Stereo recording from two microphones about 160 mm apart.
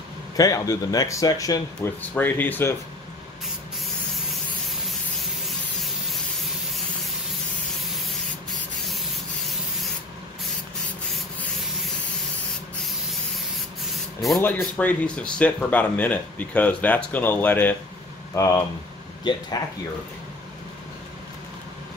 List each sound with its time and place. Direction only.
0.4 s speech: 20° left (ahead or behind)
8.5 s rub: centre (ahead or behind)
14.6 s speech: 10° left (ahead or behind)